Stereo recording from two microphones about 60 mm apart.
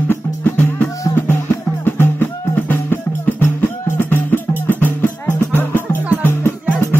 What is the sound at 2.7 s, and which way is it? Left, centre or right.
Music, left.